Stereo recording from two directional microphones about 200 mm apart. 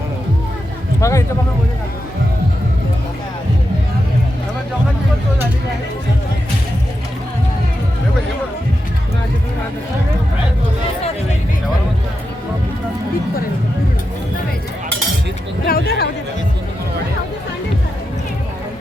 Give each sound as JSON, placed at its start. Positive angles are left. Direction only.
{"t": 1.0, "sound": "speech", "side_deg": 15}
{"t": 15.6, "sound": "speech", "side_deg": 50}